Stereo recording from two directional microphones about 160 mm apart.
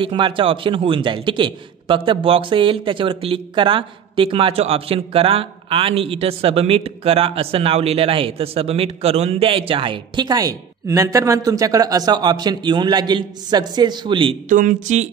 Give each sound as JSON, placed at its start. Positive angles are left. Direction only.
{"t": 0.0, "sound": "a man's voice", "side_deg": -30}
{"t": 14.5, "sound": "speech", "side_deg": -50}